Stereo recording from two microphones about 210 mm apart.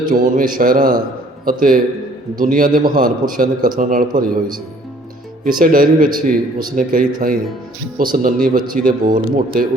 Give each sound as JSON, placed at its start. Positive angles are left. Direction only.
{"t": 0.1, "sound": "a man's voice", "side_deg": -40}
{"t": 5.5, "sound": "speech", "side_deg": -40}
{"t": 6.1, "sound": "speech", "side_deg": -20}
{"t": 6.7, "sound": "a man's voice", "side_deg": -40}